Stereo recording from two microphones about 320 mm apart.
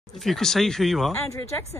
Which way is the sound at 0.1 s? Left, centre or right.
Centre.